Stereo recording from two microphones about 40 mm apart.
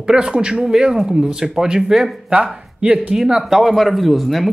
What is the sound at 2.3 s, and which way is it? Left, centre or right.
Speech, right.